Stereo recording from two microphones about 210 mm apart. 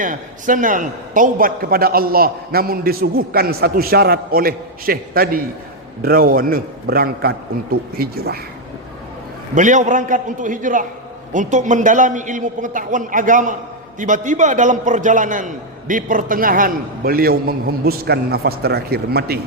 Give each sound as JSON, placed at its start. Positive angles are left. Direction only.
{"t": 0.0, "sound": "a man's voice", "side_deg": -40}
{"t": 9.6, "sound": "a man's voice", "side_deg": -35}